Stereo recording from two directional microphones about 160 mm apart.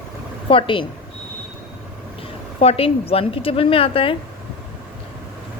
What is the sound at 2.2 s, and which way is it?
A woman's voice, 40° left (ahead or behind).